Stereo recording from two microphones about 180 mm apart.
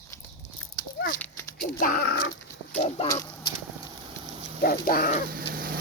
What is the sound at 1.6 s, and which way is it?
Speech, 55° left (ahead or behind).